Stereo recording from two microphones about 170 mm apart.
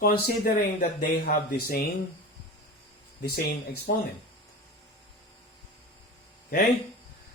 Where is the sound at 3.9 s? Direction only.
70° left (ahead or behind).